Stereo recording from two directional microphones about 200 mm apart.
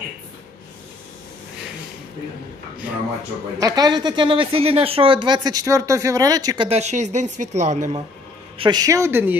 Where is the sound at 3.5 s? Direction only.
20° right (ahead or behind); by 8.0 s 35° right (ahead or behind).